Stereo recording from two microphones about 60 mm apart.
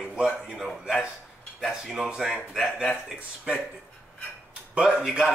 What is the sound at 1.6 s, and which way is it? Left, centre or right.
A man's voice, centre.